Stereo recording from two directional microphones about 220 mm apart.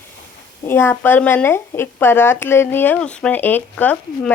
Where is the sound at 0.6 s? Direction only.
10° left (ahead or behind).